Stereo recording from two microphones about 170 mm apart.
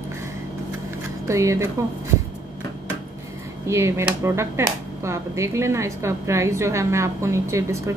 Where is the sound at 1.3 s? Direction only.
15° right (ahead or behind).